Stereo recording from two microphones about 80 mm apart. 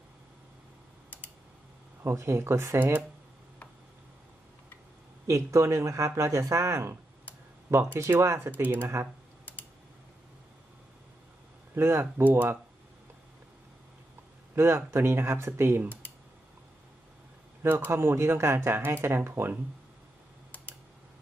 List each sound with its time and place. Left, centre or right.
2.0 s speech: right
5.2 s speech: right
7.9 s speech: right
11.7 s speech: right
14.5 s speech: right
17.6 s speech: right